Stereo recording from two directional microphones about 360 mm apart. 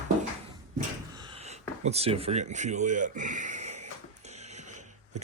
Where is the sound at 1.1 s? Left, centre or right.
Centre.